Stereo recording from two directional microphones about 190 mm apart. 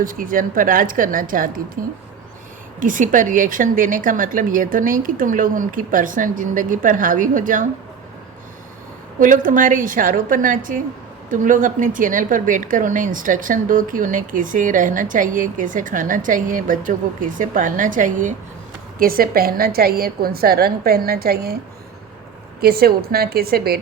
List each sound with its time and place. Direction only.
0.0 s a woman's voice: 45° right (ahead or behind)
2.8 s a woman's voice: 45° right (ahead or behind)
9.1 s a woman's voice: 45° right (ahead or behind)
22.6 s a woman's voice: 55° right (ahead or behind)